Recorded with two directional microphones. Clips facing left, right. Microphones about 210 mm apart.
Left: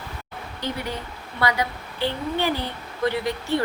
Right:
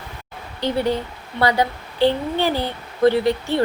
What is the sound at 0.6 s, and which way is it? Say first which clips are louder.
A woman's voice: right 9 dB; 30° right (ahead or behind).